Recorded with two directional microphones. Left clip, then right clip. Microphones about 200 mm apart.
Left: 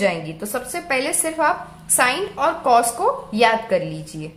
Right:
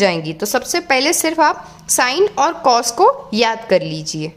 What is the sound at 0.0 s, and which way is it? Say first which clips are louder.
A woman's voice: right 5 dB; 50° right (ahead or behind).